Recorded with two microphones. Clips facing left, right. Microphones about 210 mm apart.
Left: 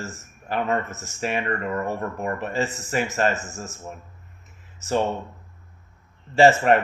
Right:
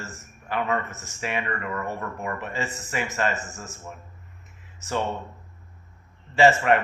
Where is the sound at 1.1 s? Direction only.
35° left (ahead or behind).